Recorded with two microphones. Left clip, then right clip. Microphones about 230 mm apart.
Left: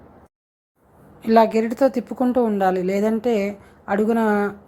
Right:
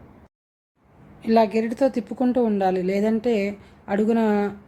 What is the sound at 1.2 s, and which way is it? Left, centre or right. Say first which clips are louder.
A woman's voice: left 3 dB; centre.